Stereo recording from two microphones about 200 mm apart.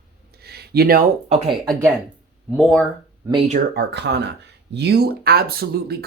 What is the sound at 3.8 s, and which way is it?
Speech, 55° right (ahead or behind).